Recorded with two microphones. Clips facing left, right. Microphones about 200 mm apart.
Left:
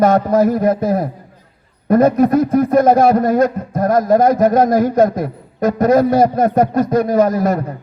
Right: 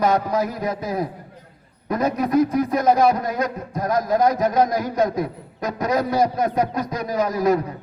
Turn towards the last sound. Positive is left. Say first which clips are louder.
# left 5 dB
turn(degrees=50)  # may be behind; listen again after turning